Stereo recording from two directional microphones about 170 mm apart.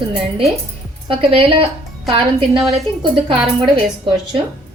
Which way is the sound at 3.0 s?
30° right (ahead or behind).